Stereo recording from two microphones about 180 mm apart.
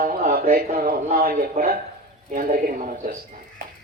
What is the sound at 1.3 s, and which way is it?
Speech, 55° right (ahead or behind).